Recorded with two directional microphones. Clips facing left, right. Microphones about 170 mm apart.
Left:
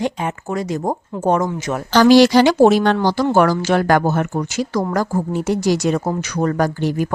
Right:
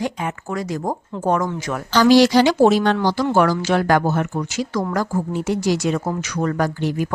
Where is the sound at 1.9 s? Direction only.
60° left (ahead or behind).